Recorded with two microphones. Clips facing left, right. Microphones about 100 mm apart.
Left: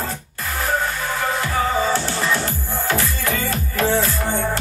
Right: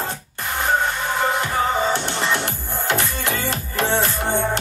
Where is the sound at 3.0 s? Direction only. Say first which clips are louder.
Left 1 dB; 25° right (ahead or behind).